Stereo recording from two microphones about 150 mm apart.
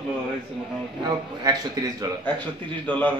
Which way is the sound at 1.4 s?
25° right (ahead or behind).